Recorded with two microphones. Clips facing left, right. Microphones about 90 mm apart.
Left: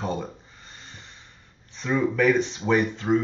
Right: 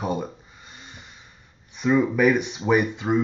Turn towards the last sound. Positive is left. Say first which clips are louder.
# right 1 dB
turn(degrees=-15)  # may be behind; listen again after turning